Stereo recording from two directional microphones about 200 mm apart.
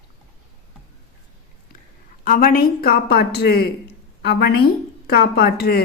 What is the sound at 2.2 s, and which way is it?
A woman's voice, 45° left (ahead or behind).